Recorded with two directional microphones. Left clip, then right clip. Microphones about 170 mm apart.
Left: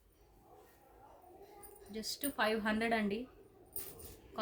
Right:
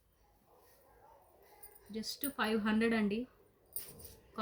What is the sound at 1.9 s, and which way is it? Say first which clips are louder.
A woman's voice: left 1 dB; 25° left (ahead or behind).